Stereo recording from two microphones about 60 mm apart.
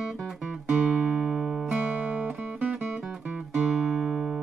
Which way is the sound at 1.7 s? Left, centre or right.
Right.